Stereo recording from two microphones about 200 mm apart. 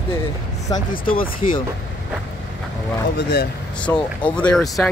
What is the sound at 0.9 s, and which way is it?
Speech, 45° left (ahead or behind).